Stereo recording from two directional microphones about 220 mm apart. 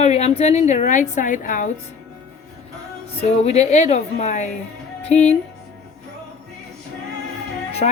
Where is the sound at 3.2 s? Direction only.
30° left (ahead or behind).